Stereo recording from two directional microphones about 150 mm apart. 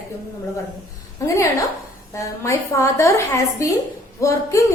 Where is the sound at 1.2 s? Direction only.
20° left (ahead or behind).